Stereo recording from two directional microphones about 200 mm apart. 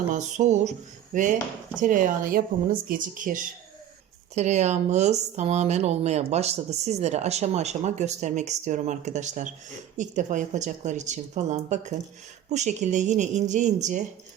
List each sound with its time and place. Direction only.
0.1 s speech: 35° right (ahead or behind)